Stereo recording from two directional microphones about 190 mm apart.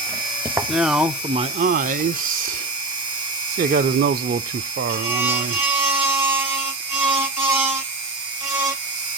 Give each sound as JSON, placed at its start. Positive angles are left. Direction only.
{"t": 0.7, "sound": "speech", "side_deg": -5}
{"t": 1.3, "sound": "speech", "side_deg": -30}
{"t": 1.6, "sound": "speech", "side_deg": -45}
{"t": 3.6, "sound": "speech", "side_deg": -45}
{"t": 5.2, "sound": "a sound", "side_deg": -10}
{"t": 7.2, "sound": "music", "side_deg": -10}